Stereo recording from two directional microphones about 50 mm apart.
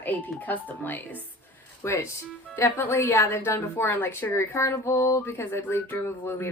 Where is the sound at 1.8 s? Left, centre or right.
Left.